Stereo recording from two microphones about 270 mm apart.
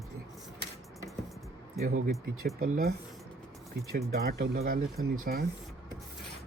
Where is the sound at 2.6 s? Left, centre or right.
Right.